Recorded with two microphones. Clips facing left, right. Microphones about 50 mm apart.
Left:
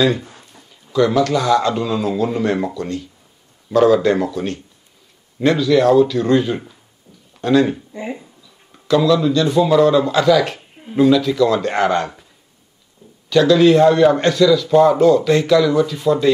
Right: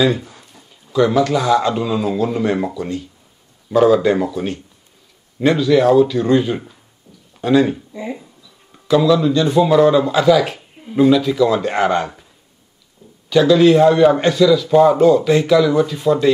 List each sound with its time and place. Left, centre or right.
0.2 s a sound: left
0.9 s a man's voice: centre
13.3 s a man's voice: centre